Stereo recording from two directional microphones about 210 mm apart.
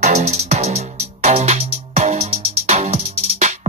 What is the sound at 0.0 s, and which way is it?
Music, 35° right (ahead or behind).